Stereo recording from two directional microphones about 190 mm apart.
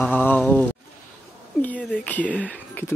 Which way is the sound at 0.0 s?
10° left (ahead or behind).